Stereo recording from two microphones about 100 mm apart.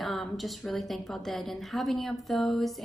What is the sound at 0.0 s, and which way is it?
Speech, centre (ahead or behind).